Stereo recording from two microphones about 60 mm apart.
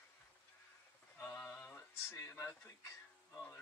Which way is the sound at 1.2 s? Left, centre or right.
Left.